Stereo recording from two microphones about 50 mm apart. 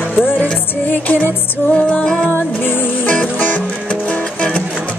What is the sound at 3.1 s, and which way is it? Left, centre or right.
Music, left.